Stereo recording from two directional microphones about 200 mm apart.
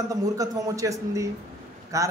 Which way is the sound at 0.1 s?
15° right (ahead or behind).